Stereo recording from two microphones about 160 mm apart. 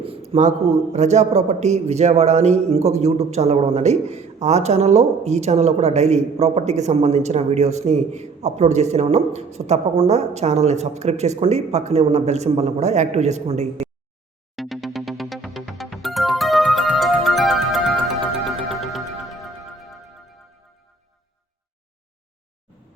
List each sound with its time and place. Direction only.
0.3 s a man's voice: 45° right (ahead or behind)
14.5 s music: centre (ahead or behind)